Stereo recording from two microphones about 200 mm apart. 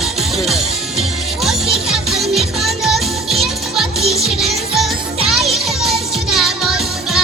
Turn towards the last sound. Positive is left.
turn(degrees=0)  # may be behind; listen again after turning